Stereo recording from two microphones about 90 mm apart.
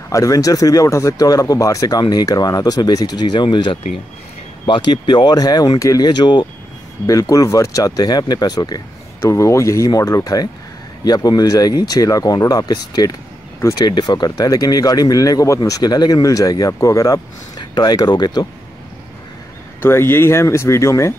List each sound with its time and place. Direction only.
0.1 s speech: 40° left (ahead or behind)
6.0 s speech: 55° left (ahead or behind)
7.1 s speech: 40° left (ahead or behind)
9.2 s speech: 35° left (ahead or behind); by 14.3 s 55° left (ahead or behind)
14.3 s speech: 45° left (ahead or behind)
17.6 s speech: 50° left (ahead or behind)
19.8 s speech: 25° left (ahead or behind)